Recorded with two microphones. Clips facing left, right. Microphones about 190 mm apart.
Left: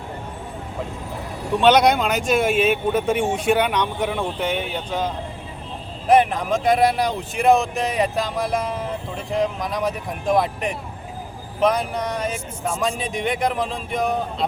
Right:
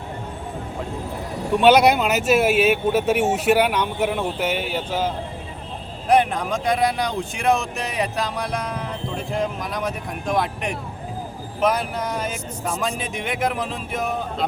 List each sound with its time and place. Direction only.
1.6 s speech: 5° right (ahead or behind)